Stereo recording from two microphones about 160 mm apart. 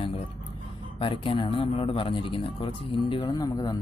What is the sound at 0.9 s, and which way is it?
Speech, 35° left (ahead or behind).